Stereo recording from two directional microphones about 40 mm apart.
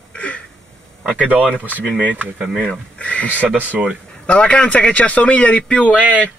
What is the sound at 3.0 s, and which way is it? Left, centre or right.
Speech, left.